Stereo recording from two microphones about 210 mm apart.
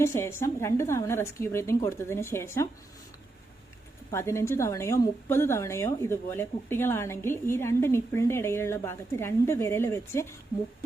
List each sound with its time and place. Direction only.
0.0 s a woman's voice: 15° left (ahead or behind)
4.1 s a woman's voice: 10° left (ahead or behind)